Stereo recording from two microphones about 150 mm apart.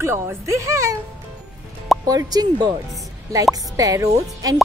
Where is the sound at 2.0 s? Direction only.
25° right (ahead or behind).